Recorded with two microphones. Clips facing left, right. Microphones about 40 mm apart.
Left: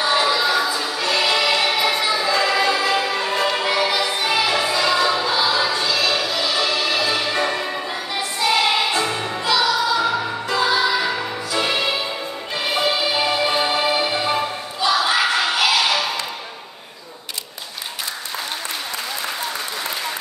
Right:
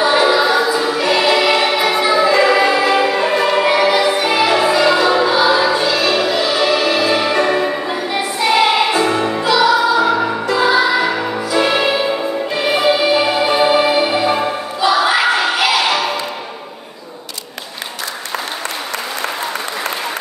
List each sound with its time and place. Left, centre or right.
0.0 s music: centre
3.3 s music: centre
3.6 s music: right
9.8 s music: right
10.5 s music: centre
14.8 s crowd: centre